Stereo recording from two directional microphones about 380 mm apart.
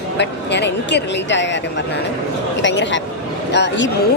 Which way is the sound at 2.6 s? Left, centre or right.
Left.